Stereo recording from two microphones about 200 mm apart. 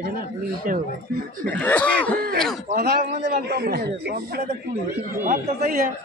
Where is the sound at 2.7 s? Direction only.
45° right (ahead or behind).